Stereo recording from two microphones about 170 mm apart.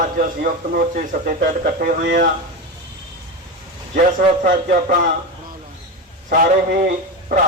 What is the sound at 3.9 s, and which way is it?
A man's voice, 50° right (ahead or behind).